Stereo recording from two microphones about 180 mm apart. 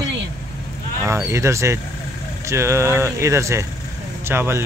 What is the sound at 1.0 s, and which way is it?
Speech, 15° right (ahead or behind).